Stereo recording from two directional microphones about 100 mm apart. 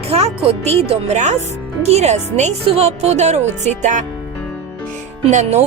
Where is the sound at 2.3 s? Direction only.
65° right (ahead or behind).